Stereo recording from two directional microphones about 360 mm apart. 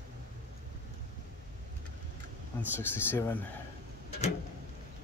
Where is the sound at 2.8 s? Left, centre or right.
Centre.